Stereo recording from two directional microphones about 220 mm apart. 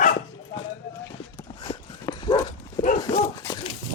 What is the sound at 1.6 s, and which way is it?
Dog, 20° left (ahead or behind).